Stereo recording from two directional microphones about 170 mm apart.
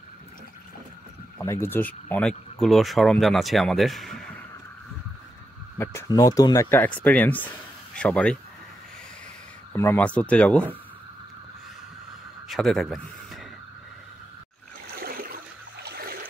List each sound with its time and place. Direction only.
1.4 s speech: 15° left (ahead or behind)
5.8 s speech: 15° left (ahead or behind)
9.7 s speech: 10° left (ahead or behind)
12.4 s speech: centre (ahead or behind)
15.0 s a sound: 60° right (ahead or behind)